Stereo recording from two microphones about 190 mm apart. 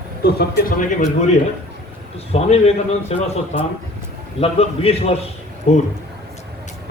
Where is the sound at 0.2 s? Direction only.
55° left (ahead or behind).